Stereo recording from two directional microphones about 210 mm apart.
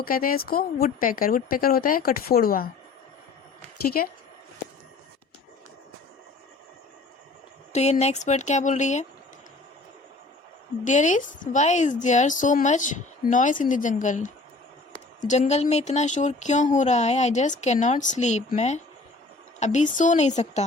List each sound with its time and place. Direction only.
0.0 s speech: 45° left (ahead or behind)
3.8 s speech: 45° left (ahead or behind)
7.7 s speech: 30° left (ahead or behind)
10.8 s speech: 35° left (ahead or behind)